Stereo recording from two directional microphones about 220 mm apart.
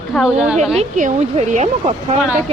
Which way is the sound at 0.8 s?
30° right (ahead or behind).